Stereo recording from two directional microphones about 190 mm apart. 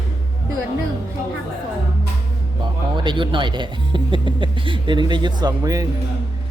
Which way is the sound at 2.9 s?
25° right (ahead or behind).